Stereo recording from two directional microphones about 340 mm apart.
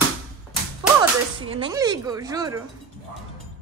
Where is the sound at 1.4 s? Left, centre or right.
Centre.